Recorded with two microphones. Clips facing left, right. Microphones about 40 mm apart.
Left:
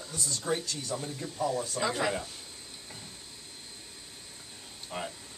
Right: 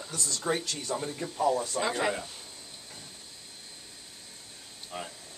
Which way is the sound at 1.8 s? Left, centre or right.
Centre.